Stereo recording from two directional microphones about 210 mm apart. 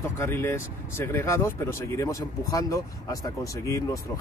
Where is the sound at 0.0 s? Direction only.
10° left (ahead or behind).